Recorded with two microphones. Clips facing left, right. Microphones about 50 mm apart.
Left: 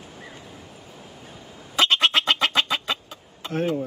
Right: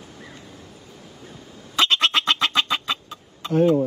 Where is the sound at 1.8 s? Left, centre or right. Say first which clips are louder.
Even; centre.